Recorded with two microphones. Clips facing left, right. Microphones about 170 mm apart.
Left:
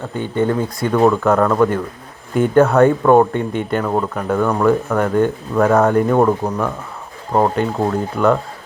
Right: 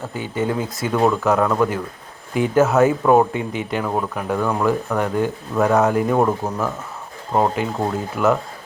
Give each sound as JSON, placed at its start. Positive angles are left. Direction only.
{"t": 0.1, "sound": "speech", "side_deg": -5}
{"t": 7.5, "sound": "speech", "side_deg": -5}